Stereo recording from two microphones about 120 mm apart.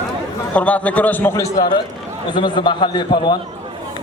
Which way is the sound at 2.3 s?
40° left (ahead or behind).